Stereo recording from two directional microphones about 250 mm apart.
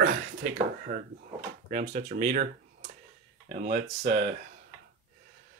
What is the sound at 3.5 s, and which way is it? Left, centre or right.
Speech, right.